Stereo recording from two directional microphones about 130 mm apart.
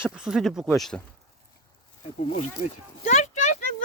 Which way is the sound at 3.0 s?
65° left (ahead or behind).